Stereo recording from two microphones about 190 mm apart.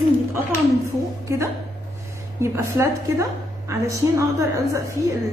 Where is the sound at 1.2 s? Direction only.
15° right (ahead or behind).